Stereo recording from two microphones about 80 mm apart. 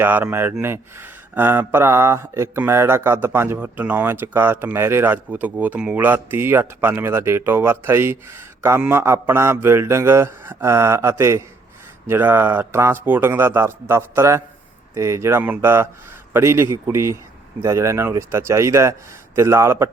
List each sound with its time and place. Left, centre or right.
0.0 s a man's voice: right